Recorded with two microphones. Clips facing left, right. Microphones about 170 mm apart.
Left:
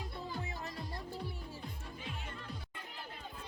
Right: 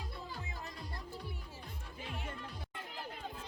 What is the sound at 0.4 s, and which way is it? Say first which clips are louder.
Music: left 3 dB; 35° left (ahead or behind).